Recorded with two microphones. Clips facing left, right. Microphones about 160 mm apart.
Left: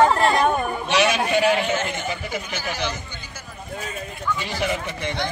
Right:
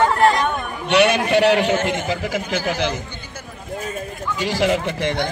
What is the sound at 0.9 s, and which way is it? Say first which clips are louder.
A man's voice: right 5 dB; 60° right (ahead or behind).